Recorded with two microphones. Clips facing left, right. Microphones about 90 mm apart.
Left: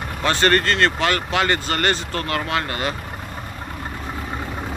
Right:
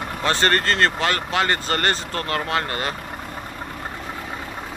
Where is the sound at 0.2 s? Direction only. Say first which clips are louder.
Left 2 dB; 30° right (ahead or behind).